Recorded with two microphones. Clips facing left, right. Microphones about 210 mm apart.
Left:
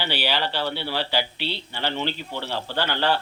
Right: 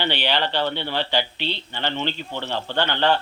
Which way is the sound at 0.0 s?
5° left (ahead or behind).